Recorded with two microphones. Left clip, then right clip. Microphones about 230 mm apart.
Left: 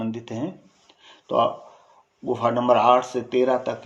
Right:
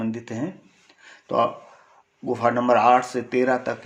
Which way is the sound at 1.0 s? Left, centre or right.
Right.